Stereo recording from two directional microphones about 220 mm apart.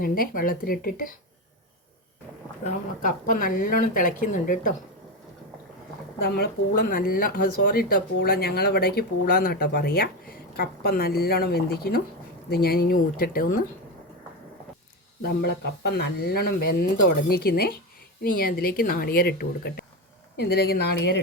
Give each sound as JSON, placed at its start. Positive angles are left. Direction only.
{"t": 0.0, "sound": "speech", "side_deg": 40}
{"t": 2.6, "sound": "speech", "side_deg": 35}
{"t": 6.3, "sound": "speech", "side_deg": 40}
{"t": 15.2, "sound": "speech", "side_deg": 45}